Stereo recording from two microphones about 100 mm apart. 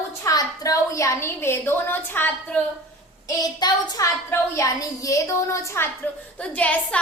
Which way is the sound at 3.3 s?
40° left (ahead or behind).